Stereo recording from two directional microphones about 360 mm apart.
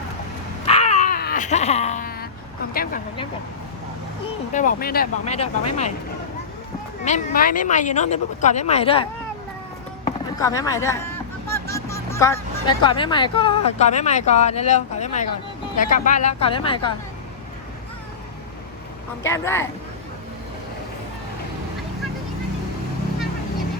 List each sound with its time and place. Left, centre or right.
0.6 s a sound: centre
2.7 s speech: left
4.5 s speech: left
7.0 s speech: centre
19.2 s speech: centre